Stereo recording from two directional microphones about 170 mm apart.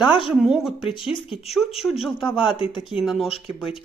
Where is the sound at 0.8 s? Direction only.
30° left (ahead or behind).